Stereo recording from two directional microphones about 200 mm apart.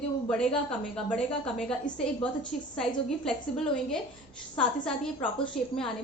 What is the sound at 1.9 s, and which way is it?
Speech, 20° left (ahead or behind).